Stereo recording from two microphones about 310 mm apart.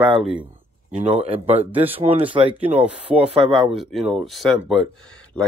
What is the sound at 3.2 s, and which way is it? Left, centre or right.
Speech, centre.